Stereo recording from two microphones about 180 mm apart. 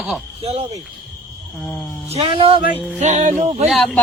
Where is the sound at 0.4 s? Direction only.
35° right (ahead or behind).